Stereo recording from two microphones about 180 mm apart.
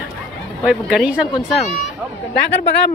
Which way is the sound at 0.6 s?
5° right (ahead or behind).